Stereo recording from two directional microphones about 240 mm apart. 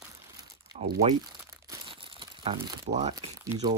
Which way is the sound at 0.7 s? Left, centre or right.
Right.